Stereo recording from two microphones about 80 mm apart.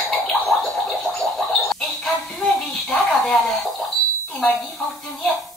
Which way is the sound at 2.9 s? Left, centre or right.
Centre.